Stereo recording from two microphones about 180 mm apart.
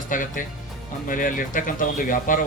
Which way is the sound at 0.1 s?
45° left (ahead or behind).